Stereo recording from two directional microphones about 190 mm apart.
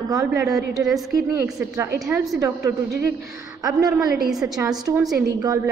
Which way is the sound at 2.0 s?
Centre (ahead or behind).